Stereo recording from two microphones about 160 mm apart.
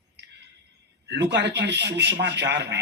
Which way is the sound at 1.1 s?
90° right.